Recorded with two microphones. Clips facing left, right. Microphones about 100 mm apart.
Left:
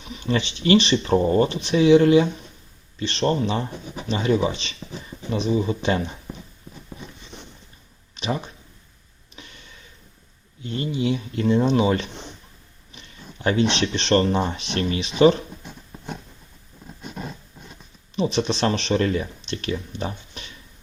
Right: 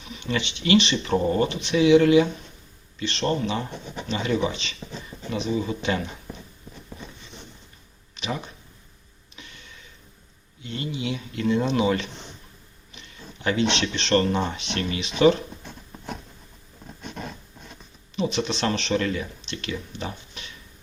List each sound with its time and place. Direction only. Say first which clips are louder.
0.0 s speech: left 4 dB; 35° left (ahead or behind)
8.1 s a sound: left 4 dB; 35° left (ahead or behind)
10.6 s speech: left 5 dB; 35° left (ahead or behind)
17.0 s roaring cats: left 1 dB; 5° left (ahead or behind)
18.2 s speech: left 3 dB; 35° left (ahead or behind)